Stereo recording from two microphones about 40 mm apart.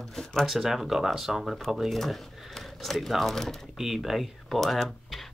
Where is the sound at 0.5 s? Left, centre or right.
Centre.